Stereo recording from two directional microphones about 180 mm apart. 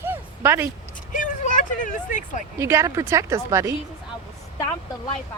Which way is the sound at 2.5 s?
15° right (ahead or behind).